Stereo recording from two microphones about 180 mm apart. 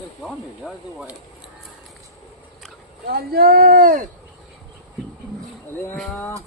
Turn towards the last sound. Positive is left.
turn(degrees=10)  # may be behind; listen again after turning